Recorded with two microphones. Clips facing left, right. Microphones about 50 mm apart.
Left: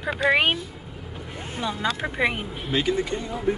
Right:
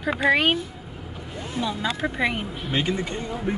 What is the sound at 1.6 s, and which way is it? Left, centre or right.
Speech, centre.